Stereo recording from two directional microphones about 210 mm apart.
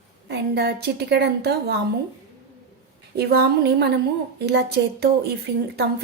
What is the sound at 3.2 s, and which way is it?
Speech, 50° right (ahead or behind).